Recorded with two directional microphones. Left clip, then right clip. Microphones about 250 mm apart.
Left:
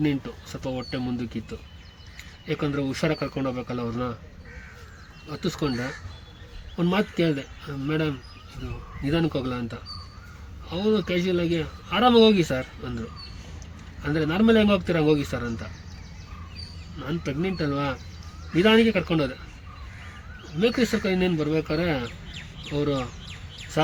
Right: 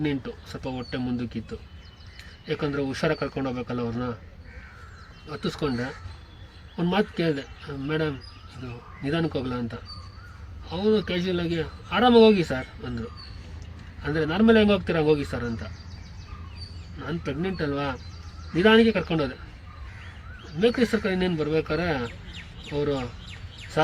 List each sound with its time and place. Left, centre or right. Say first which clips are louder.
0.0 s speech: left 2 dB; centre
5.3 s speech: even; centre
6.7 s speech: left 1 dB; centre
17.0 s speech: left 1 dB; centre
20.6 s speech: right 1 dB; centre